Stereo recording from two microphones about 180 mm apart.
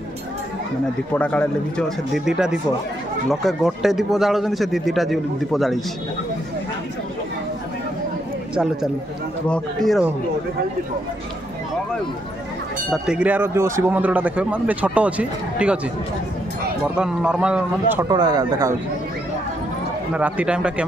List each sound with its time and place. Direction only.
1.1 s speech: 5° left (ahead or behind)
9.5 s speech: centre (ahead or behind)
12.9 s speech: 5° right (ahead or behind)
16.9 s speech: 5° right (ahead or behind)
18.0 s speech: 20° right (ahead or behind)
20.2 s speech: 5° right (ahead or behind)